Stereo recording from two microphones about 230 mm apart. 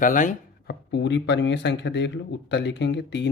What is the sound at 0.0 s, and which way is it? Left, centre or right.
Chopping, left.